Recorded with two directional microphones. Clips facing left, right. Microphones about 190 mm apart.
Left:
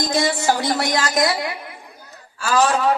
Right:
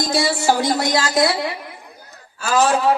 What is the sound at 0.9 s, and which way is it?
Speech, 30° right (ahead or behind).